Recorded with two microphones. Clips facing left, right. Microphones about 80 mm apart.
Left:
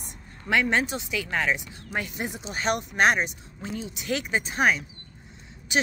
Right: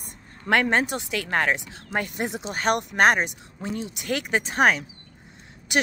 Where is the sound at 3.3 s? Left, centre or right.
Right.